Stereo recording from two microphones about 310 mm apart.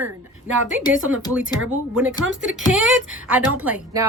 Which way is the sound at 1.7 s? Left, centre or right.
Centre.